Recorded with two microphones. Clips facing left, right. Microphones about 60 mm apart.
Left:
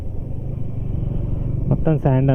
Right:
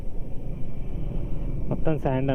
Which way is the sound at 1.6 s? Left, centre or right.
Centre.